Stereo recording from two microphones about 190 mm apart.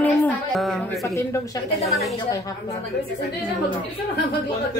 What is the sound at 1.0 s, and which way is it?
Speech, 15° left (ahead or behind).